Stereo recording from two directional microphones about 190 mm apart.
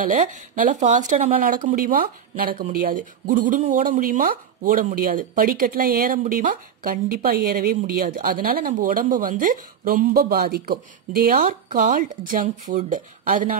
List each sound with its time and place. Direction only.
0.0 s a woman's voice: 40° right (ahead or behind)